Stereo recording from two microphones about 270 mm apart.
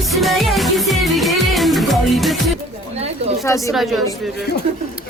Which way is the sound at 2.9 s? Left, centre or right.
Right.